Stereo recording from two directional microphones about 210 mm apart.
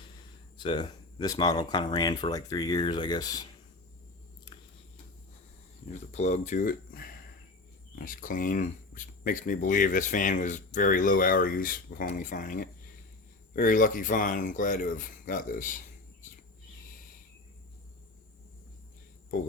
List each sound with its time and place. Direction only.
0.5 s speech: 20° left (ahead or behind)
5.9 s speech: 35° left (ahead or behind)